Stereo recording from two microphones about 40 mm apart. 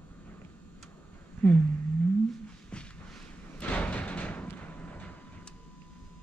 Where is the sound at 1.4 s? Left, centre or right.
Left.